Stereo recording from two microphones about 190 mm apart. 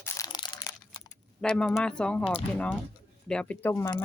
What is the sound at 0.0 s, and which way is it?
Crushing, 15° left (ahead or behind).